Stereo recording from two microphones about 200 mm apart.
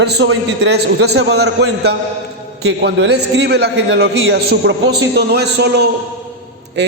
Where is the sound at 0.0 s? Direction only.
60° right (ahead or behind).